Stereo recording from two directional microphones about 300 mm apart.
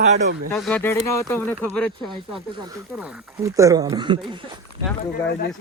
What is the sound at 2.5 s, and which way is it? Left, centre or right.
Speech, centre.